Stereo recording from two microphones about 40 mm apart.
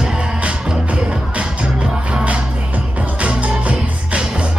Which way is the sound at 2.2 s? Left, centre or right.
Right.